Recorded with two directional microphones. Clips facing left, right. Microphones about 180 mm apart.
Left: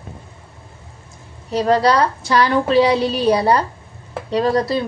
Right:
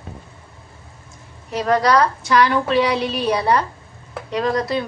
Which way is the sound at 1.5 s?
30° left (ahead or behind).